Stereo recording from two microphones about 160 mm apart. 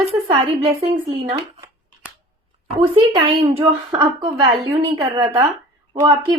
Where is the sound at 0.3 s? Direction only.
35° right (ahead or behind).